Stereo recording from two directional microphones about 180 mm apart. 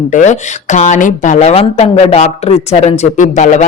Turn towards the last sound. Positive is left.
turn(degrees=40)  # may be behind; listen again after turning